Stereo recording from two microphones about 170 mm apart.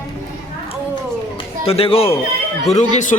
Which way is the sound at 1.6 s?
35° left (ahead or behind).